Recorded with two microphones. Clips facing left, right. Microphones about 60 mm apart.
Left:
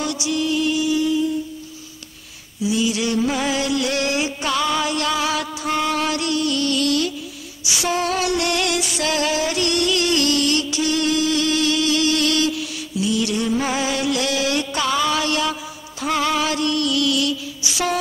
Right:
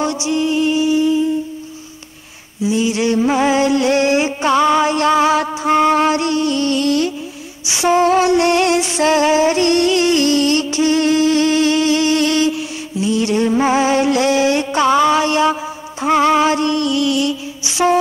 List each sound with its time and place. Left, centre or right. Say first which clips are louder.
0.0 s music: right 5 dB; right
2.6 s a sound: right 4 dB; right
16.0 s music: right 8 dB; right